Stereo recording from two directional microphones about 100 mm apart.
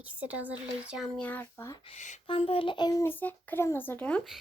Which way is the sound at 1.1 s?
15° left (ahead or behind).